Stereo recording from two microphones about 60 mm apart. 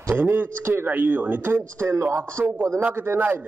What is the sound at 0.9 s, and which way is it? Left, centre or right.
Speech, right.